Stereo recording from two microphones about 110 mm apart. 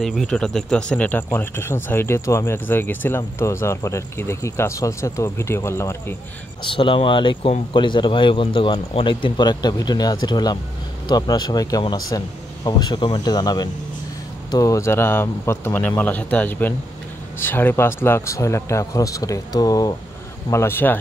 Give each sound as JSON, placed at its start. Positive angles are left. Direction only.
{"t": 0.0, "sound": "speech", "side_deg": 0}
{"t": 6.6, "sound": "speech", "side_deg": 50}
{"t": 20.4, "sound": "speech", "side_deg": 25}